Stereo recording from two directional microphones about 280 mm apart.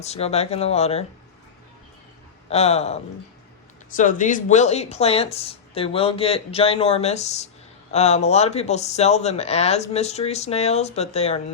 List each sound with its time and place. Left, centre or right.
0.0 s speech: left
2.5 s speech: left